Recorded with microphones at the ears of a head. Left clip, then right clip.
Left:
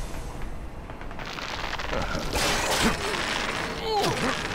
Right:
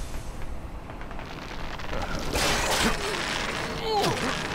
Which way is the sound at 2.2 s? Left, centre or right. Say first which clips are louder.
Right 1 dB; centre.